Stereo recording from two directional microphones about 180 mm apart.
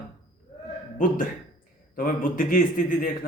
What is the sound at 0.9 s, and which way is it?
A man's voice, 50° left (ahead or behind).